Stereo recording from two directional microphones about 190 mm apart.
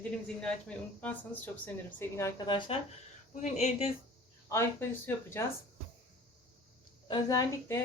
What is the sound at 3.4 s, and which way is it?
Speech, 35° left (ahead or behind).